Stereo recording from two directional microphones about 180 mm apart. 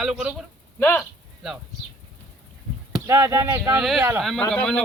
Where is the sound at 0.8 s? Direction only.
15° left (ahead or behind).